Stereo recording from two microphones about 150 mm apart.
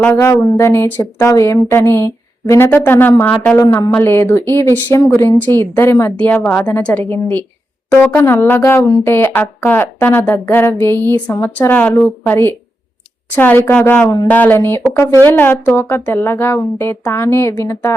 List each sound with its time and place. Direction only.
0.0 s speech: 20° left (ahead or behind)